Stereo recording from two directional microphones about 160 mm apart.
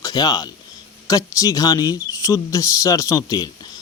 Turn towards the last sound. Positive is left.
turn(degrees=20)  # may be behind; listen again after turning